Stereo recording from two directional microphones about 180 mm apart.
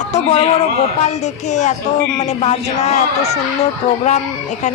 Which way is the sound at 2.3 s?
40° left (ahead or behind).